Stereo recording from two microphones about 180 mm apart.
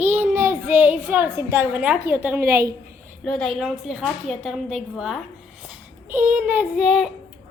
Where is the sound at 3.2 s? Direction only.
5° left (ahead or behind).